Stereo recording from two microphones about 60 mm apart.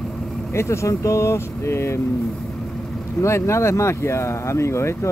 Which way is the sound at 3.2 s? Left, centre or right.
Left.